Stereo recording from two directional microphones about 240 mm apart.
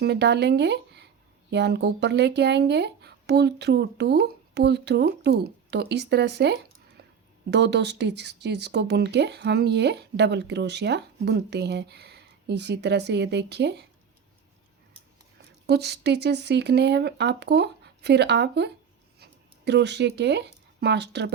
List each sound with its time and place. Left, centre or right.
0.0 s speech: right
15.6 s speech: right